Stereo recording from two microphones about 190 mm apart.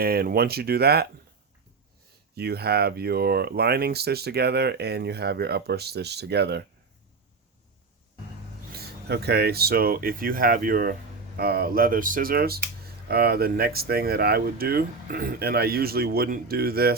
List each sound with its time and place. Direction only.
0.0 s speech: 55° right (ahead or behind)
2.3 s speech: 55° right (ahead or behind)
8.7 s speech: 55° right (ahead or behind)